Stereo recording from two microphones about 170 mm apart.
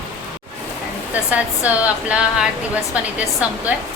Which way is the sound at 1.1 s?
10° right (ahead or behind).